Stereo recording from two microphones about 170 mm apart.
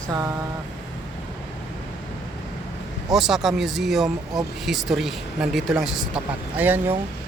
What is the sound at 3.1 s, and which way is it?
Speech, centre (ahead or behind).